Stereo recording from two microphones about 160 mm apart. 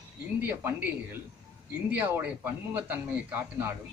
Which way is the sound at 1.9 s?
10° right (ahead or behind).